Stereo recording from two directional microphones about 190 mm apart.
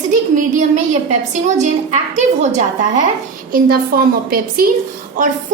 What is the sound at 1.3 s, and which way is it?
A woman's voice, 40° right (ahead or behind).